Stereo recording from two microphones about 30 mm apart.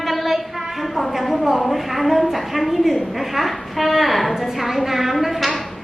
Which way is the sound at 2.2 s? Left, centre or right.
Centre.